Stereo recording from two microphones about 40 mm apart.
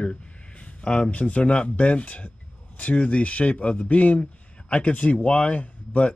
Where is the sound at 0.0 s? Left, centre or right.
Left.